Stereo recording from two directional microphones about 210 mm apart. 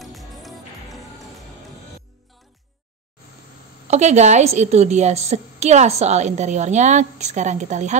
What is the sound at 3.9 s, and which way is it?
A woman's voice, 35° right (ahead or behind).